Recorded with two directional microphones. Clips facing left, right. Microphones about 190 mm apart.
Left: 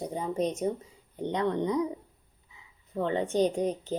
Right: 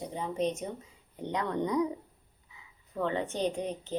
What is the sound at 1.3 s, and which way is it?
Speech, 25° left (ahead or behind).